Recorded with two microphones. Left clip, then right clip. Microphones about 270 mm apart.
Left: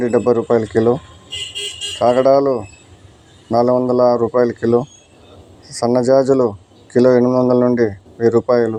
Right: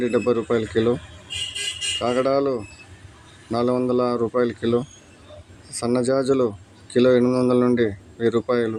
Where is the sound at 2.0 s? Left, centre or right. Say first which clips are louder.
Left 10 dB; centre.